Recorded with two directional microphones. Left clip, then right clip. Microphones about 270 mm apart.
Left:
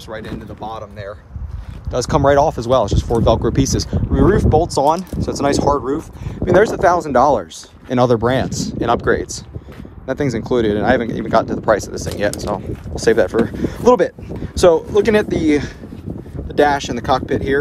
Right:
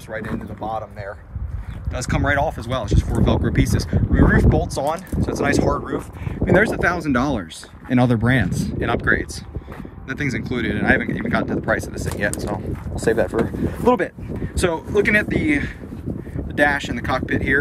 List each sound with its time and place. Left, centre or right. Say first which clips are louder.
0.1 s speech: right 1 dB; centre
1.9 s speech: left 8 dB; centre
13.3 s speech: left 4 dB; right
14.0 s speech: left 6 dB; centre